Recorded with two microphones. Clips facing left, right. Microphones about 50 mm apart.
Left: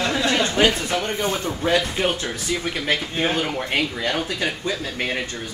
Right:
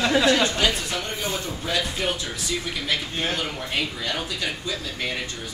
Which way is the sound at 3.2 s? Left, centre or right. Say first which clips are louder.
Left 5 dB; left.